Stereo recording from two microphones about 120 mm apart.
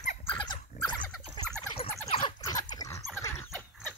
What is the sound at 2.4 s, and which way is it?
Dog, 35° left (ahead or behind).